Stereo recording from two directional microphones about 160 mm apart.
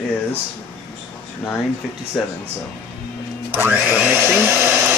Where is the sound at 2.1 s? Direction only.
5° left (ahead or behind).